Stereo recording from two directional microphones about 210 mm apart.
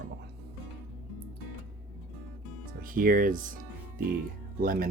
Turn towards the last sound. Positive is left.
turn(degrees=-45)  # may be behind; listen again after turning